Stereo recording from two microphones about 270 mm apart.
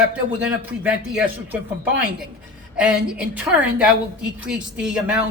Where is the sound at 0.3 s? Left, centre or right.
Centre.